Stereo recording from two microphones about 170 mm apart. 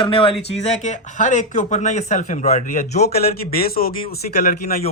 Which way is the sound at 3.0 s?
65° left (ahead or behind).